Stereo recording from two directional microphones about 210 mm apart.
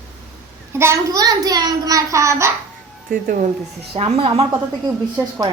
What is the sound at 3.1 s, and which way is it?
Speech, 45° right (ahead or behind).